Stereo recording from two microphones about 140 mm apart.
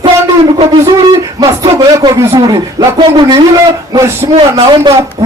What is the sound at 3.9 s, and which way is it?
Speech, 20° right (ahead or behind).